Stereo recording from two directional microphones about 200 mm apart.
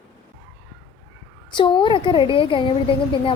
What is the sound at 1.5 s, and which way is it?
A woman's voice, 25° left (ahead or behind).